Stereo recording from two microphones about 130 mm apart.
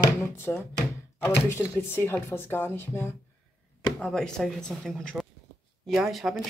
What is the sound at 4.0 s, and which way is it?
Speech, 5° left (ahead or behind).